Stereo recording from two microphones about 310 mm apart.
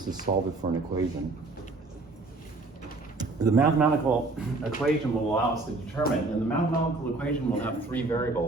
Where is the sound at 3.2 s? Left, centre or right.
Centre.